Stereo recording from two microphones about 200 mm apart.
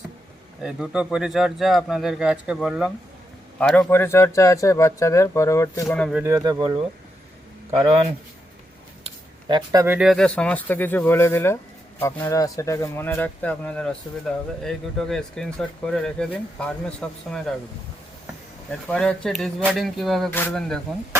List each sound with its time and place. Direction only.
0.6 s speech: 5° right (ahead or behind); by 6.0 s 15° left (ahead or behind)
6.0 s speech: centre (ahead or behind)
6.2 s speech: 20° right (ahead or behind)
9.0 s speech: 20° right (ahead or behind); by 17.5 s 5° left (ahead or behind)
18.9 s speech: 5° left (ahead or behind)